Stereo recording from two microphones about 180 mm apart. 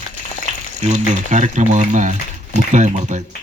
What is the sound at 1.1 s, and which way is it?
Speech, 40° right (ahead or behind).